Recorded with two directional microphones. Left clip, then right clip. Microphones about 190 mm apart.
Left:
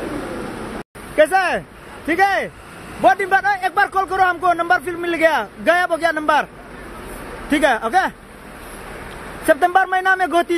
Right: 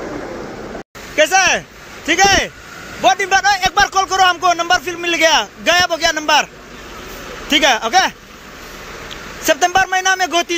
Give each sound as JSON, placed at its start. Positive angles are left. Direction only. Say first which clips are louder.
{"t": 1.1, "sound": "a sound", "louder": "right 3 dB", "side_deg": 10}
{"t": 2.0, "sound": "speech", "louder": "right 4 dB", "side_deg": 10}
{"t": 3.0, "sound": "speech", "louder": "right 1 dB", "side_deg": 25}
{"t": 3.3, "sound": "speech", "louder": "right 3 dB", "side_deg": 10}
{"t": 7.5, "sound": "speech", "louder": "right 3 dB", "side_deg": 10}
{"t": 9.5, "sound": "speech", "louder": "right 1 dB", "side_deg": 10}